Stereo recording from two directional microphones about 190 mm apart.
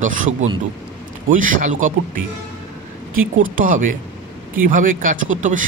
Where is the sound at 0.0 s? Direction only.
40° right (ahead or behind).